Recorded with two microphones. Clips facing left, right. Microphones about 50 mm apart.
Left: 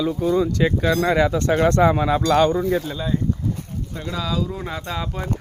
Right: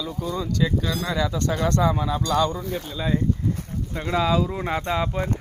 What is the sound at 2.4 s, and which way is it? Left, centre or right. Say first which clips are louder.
Speech: left 6 dB; left.